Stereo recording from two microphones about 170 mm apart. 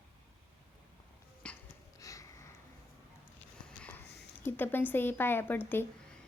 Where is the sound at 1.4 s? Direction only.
5° left (ahead or behind).